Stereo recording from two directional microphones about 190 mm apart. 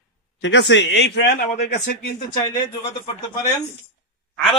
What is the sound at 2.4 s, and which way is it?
Speech, 20° left (ahead or behind).